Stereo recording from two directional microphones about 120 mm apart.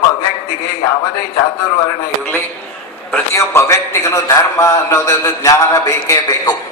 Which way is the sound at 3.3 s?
20° left (ahead or behind).